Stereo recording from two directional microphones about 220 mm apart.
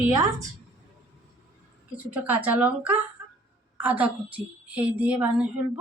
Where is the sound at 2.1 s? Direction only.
5° right (ahead or behind).